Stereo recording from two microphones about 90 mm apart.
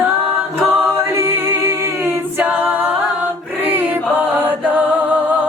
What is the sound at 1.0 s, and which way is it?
A capella, 30° right (ahead or behind).